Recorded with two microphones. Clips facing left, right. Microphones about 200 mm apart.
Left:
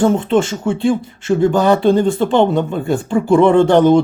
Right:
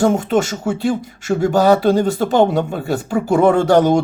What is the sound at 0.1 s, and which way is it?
Speech, 10° right (ahead or behind).